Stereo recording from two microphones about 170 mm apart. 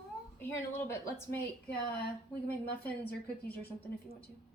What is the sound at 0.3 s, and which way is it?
Speech, 15° left (ahead or behind).